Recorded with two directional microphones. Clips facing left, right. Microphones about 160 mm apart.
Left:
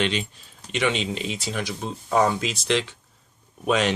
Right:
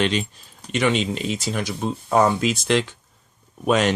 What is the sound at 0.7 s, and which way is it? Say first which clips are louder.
Speech: right 4 dB; 45° right (ahead or behind).